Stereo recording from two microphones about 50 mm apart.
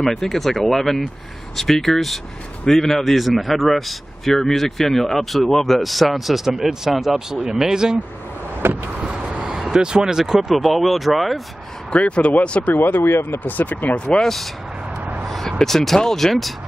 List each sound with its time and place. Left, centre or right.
0.0 s a man's voice: centre
8.6 s vehicle: right
9.0 s vehicle: centre
10.5 s a man's voice: centre
11.9 s speech: left
12.7 s speech: left
13.4 s speech: left
13.9 s speech: left
14.2 s a man's voice: centre
15.2 s vehicle: centre
15.6 s a man's voice: centre